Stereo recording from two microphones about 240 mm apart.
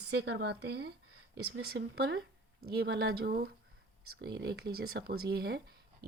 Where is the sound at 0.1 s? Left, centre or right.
Right.